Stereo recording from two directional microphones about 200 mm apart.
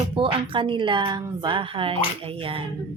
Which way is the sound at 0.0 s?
25° right (ahead or behind).